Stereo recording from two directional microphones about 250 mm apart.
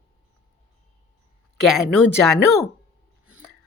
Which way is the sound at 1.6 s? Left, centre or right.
Centre.